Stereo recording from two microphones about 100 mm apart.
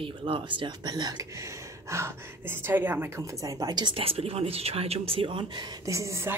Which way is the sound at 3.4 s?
35° right (ahead or behind).